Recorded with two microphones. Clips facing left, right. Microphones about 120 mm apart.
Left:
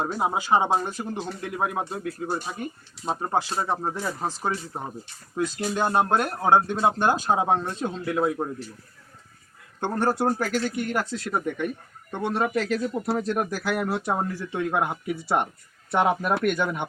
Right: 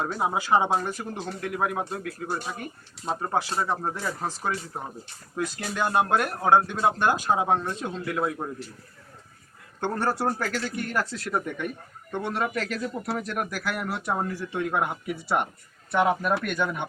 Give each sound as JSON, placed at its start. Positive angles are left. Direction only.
{"t": 0.0, "sound": "speech", "side_deg": 25}
{"t": 4.5, "sound": "speech", "side_deg": 35}
{"t": 9.8, "sound": "speech", "side_deg": 20}